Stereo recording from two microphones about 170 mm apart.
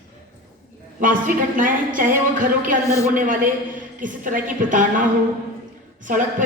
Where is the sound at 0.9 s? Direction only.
50° right (ahead or behind).